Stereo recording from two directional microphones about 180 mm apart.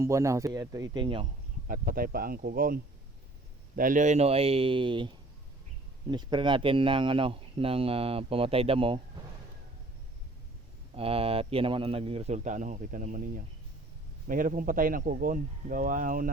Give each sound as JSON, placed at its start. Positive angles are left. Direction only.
{"t": 0.0, "sound": "speech", "side_deg": -15}
{"t": 1.6, "sound": "speech", "side_deg": -50}
{"t": 10.9, "sound": "speech", "side_deg": -30}